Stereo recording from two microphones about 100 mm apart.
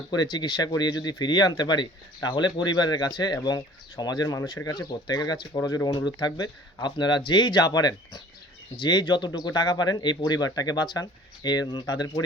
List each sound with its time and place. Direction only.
0.1 s speech: 45° left (ahead or behind)